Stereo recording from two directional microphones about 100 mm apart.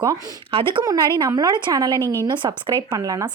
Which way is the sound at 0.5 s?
55° right (ahead or behind).